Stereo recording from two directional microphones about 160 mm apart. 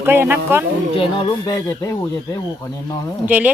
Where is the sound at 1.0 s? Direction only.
30° left (ahead or behind).